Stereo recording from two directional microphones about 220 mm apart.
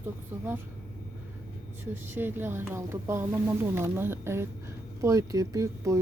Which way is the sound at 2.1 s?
10° right (ahead or behind).